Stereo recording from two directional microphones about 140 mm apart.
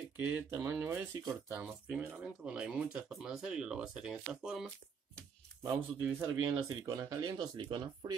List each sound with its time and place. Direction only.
0.2 s speech: 20° right (ahead or behind)
5.6 s speech: 15° right (ahead or behind)
6.9 s speech: 30° right (ahead or behind)